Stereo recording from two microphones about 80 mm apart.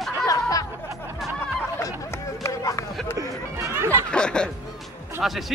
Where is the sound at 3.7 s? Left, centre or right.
Right.